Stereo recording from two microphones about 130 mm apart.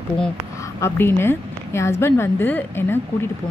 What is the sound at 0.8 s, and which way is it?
A woman's voice, 20° left (ahead or behind).